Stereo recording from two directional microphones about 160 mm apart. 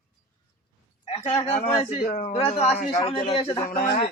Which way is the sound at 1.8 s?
35° left (ahead or behind).